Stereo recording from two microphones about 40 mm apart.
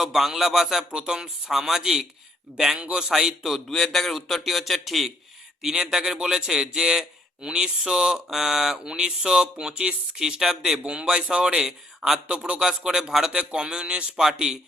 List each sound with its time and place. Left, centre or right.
0.0 s speech: centre
2.7 s a man's voice: right
3.7 s speech: centre
5.6 s a man's voice: centre